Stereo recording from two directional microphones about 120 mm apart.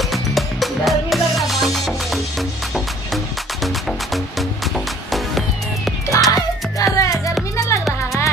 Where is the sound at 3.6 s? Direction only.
Centre (ahead or behind).